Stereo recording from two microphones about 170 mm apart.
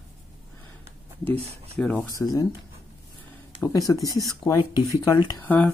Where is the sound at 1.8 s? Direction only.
10° left (ahead or behind).